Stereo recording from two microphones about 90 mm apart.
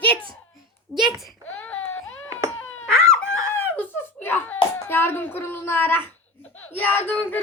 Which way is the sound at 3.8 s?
25° left (ahead or behind).